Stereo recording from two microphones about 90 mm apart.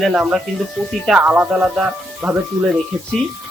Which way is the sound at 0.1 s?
10° right (ahead or behind).